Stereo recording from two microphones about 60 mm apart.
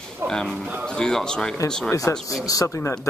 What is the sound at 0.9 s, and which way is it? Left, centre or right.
Speech, centre.